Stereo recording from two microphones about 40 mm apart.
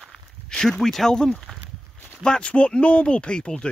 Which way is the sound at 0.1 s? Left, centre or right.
Centre.